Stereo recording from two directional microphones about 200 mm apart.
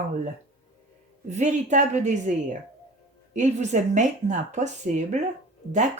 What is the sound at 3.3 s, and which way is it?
Speech, 35° right (ahead or behind).